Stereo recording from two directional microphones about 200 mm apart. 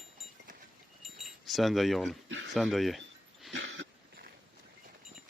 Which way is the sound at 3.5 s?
65° right (ahead or behind).